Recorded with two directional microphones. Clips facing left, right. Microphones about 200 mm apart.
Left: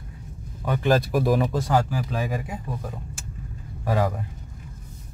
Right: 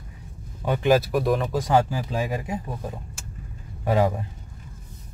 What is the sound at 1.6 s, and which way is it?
Speech, 20° right (ahead or behind).